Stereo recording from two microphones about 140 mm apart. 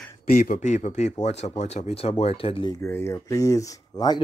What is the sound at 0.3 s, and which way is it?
A man's voice, 80° left.